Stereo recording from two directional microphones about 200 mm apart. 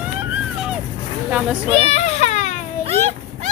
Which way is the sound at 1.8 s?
35° left (ahead or behind).